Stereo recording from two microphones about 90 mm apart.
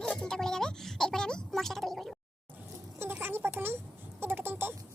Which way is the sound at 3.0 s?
25° right (ahead or behind).